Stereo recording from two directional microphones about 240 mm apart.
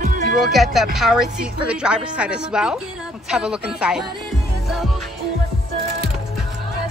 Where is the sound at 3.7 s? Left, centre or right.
Centre.